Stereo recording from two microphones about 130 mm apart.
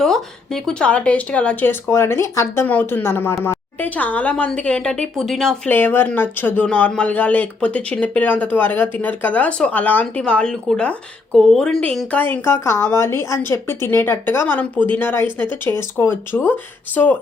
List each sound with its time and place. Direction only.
0.0 s speech: 5° left (ahead or behind)
5.7 s speech: 15° left (ahead or behind)